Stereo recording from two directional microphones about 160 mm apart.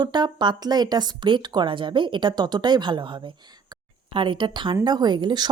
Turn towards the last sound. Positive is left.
turn(degrees=-25)  # may be behind; listen again after turning